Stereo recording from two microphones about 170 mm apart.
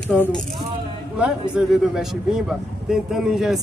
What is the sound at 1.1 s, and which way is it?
Speech, 5° right (ahead or behind).